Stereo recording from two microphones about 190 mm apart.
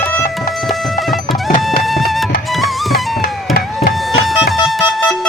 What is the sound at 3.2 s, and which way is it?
Music, 50° left (ahead or behind).